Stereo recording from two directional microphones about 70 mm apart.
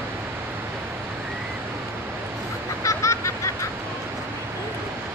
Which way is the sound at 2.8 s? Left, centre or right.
Left.